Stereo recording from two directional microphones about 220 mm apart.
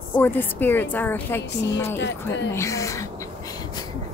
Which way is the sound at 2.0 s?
55° left (ahead or behind).